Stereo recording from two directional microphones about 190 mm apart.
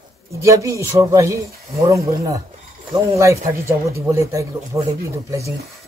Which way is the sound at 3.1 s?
15° right (ahead or behind).